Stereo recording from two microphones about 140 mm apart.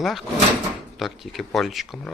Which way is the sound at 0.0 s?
Centre (ahead or behind).